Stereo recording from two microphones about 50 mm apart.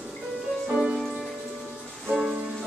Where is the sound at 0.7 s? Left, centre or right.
Centre.